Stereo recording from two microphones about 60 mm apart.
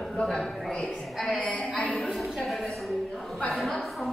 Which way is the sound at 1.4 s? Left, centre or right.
Left.